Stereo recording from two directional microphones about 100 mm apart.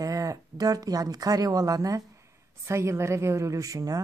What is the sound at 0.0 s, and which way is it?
A woman's voice, 35° right (ahead or behind).